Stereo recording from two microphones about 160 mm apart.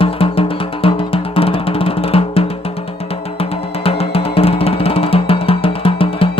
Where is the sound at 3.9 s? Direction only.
35° left (ahead or behind).